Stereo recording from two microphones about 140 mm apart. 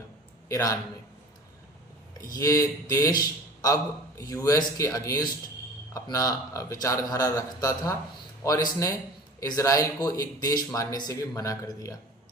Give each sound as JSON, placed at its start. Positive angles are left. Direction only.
{"t": 0.4, "sound": "a man's voice", "side_deg": 25}
{"t": 2.3, "sound": "a man's voice", "side_deg": 25}